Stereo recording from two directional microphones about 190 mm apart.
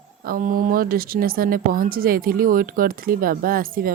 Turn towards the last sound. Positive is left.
turn(degrees=-50)  # may be behind; listen again after turning